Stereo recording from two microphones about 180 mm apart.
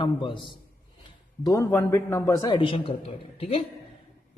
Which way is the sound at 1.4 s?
15° left (ahead or behind).